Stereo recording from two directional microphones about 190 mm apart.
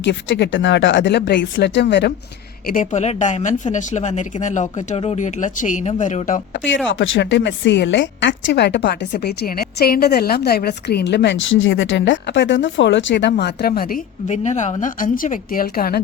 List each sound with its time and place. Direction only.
0.0 s speech: 70° left (ahead or behind)
2.6 s speech: 40° left (ahead or behind)
6.7 s a woman's voice: 80° left; by 14.0 s 50° left (ahead or behind)
14.3 s a woman's voice: 40° left (ahead or behind); by 16.0 s 55° left (ahead or behind)